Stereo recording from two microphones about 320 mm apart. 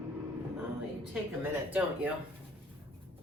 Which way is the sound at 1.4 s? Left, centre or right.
Centre.